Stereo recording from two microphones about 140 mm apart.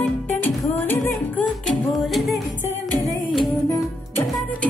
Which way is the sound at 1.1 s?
Centre (ahead or behind).